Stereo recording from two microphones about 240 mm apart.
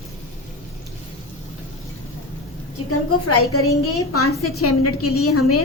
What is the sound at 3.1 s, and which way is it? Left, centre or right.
A woman's voice, left.